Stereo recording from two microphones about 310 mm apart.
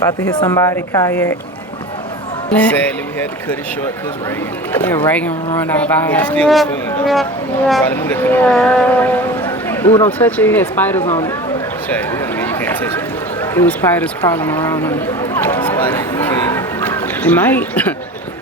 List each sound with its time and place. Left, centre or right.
0.3 s a woman's voice: centre
2.5 s speech: centre
4.7 s speech: centre
7.7 s speech: centre
11.0 s speech: centre
11.9 s a sound: centre